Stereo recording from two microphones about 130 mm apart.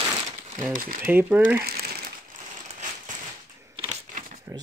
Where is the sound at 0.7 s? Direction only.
90° right.